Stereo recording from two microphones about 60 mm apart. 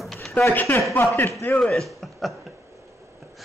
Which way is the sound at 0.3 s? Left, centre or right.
Left.